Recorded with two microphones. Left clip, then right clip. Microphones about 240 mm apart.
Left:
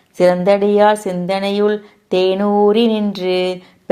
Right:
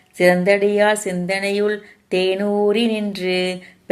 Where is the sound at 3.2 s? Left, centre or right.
Left.